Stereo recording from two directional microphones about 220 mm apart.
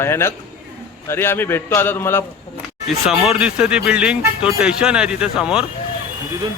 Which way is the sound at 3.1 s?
5° right (ahead or behind).